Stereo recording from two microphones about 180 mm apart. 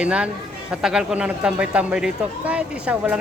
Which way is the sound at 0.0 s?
5° right (ahead or behind).